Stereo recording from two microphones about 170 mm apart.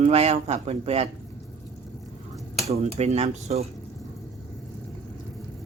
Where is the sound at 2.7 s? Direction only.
40° right (ahead or behind).